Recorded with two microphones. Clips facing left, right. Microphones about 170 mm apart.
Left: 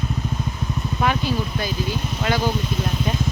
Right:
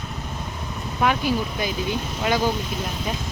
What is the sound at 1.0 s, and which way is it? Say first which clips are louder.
Speech: right 1 dB; 15° right (ahead or behind).